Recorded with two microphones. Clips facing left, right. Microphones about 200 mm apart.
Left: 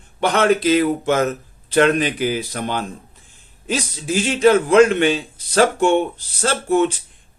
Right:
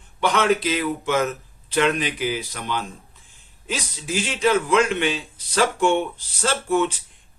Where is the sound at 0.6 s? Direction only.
40° left (ahead or behind).